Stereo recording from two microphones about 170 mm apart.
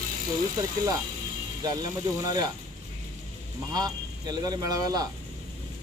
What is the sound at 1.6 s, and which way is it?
Speech, 25° right (ahead or behind).